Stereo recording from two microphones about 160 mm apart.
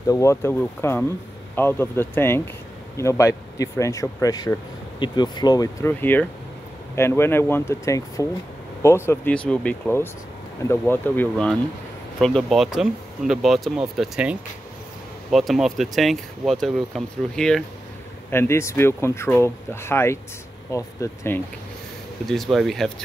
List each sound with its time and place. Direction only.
0.0 s speech: 20° left (ahead or behind); by 14.3 s 5° right (ahead or behind)
15.3 s speech: centre (ahead or behind)
18.3 s speech: 15° left (ahead or behind)
22.3 s speech: centre (ahead or behind)